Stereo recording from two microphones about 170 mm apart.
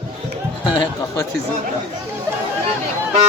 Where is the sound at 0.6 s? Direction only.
25° left (ahead or behind).